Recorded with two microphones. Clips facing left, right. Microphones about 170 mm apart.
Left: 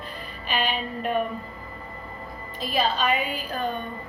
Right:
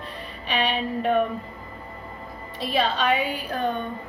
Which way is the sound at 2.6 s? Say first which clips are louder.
Right 1 dB; 70° right (ahead or behind).